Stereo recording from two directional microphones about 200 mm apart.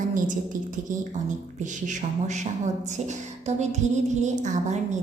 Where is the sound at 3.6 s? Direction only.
35° right (ahead or behind).